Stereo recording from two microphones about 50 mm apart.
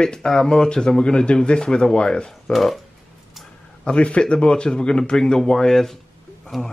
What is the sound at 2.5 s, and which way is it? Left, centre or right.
Speech, centre.